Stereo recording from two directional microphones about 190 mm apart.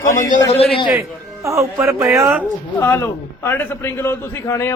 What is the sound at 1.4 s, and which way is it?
Speech, 15° right (ahead or behind).